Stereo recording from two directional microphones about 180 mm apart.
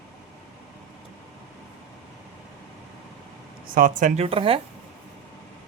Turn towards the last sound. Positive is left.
turn(degrees=-30)  # may be behind; listen again after turning